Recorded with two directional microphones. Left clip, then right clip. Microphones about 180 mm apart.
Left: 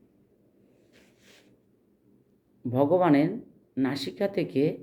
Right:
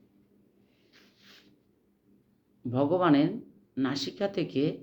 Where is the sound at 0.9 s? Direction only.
40° left (ahead or behind).